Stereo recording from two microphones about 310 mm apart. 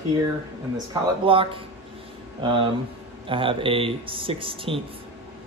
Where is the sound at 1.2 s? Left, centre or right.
Centre.